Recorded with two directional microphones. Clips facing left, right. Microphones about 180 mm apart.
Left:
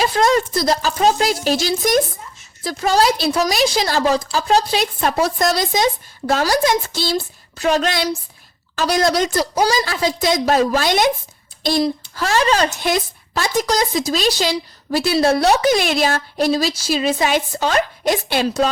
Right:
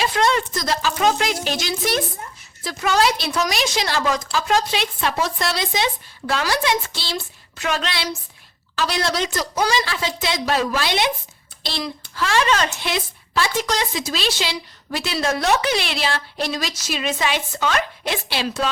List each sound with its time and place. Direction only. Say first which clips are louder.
0.0 s a woman's voice: left 4 dB; 40° left (ahead or behind)